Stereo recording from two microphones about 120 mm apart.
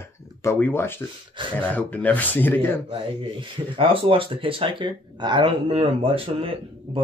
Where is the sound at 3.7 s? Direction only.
50° right (ahead or behind).